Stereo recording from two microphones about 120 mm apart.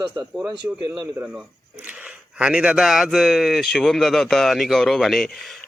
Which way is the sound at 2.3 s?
10° right (ahead or behind).